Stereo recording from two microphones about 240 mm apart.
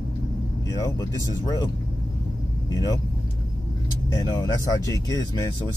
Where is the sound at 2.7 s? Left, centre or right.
Centre.